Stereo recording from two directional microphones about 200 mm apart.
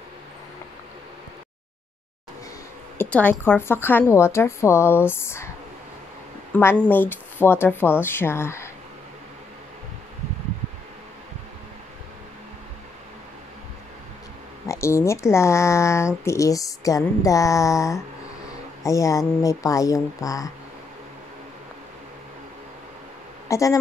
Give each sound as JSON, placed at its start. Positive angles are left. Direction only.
{"t": 3.0, "sound": "speech", "side_deg": 5}
{"t": 6.5, "sound": "speech", "side_deg": 10}
{"t": 14.7, "sound": "speech", "side_deg": 15}
{"t": 23.5, "sound": "speech", "side_deg": 15}